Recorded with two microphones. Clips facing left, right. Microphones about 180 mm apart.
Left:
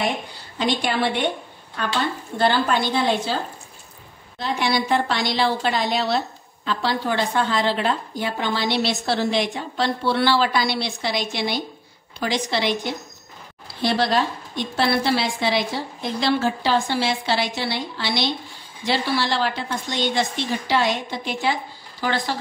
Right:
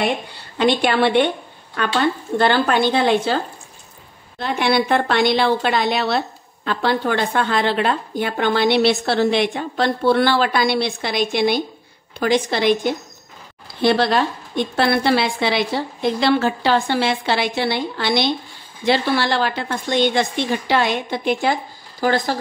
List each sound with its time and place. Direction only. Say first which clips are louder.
0.6 s a woman's voice: right 6 dB; 65° right (ahead or behind)
4.4 s a woman's voice: right 4 dB; 60° right (ahead or behind); by 22.4 s 45° right (ahead or behind)